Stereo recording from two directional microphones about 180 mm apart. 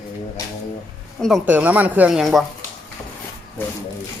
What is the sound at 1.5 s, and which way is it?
Speech, 10° right (ahead or behind).